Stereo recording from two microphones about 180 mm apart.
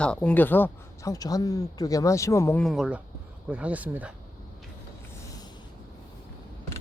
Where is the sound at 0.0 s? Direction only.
5° left (ahead or behind).